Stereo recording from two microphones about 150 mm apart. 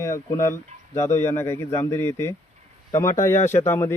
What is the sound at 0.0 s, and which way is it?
Speech, 20° left (ahead or behind).